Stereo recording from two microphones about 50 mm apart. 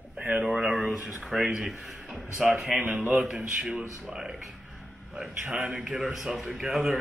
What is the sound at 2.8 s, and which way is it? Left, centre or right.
Speech, right.